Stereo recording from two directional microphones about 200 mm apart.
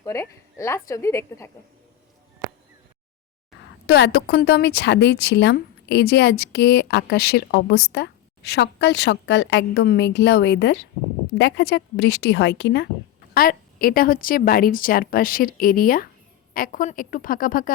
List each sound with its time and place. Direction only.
0.0 s a woman's voice: 15° left (ahead or behind)
3.8 s a woman's voice: 55° left (ahead or behind)